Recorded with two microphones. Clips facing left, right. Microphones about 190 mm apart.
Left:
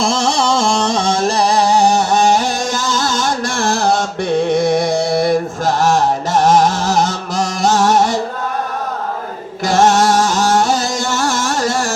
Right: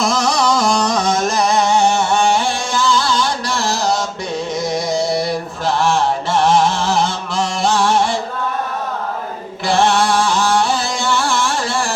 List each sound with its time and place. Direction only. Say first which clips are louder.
0.0 s music: left 1 dB; 30° left (ahead or behind); by 4.0 s 55° left (ahead or behind)
4.4 s mantra: left 4 dB; 60° left (ahead or behind); by 8.1 s 45° left (ahead or behind)
9.6 s music: left 3 dB; 45° left (ahead or behind)